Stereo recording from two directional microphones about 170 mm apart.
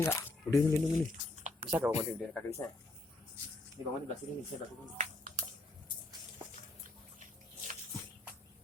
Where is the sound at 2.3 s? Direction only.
15° left (ahead or behind).